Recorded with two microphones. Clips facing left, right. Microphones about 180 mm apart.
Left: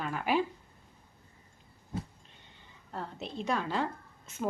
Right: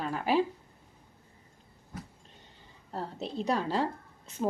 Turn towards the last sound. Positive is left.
turn(degrees=-35)  # may be behind; listen again after turning